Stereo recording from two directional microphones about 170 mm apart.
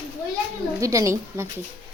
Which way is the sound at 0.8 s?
20° right (ahead or behind).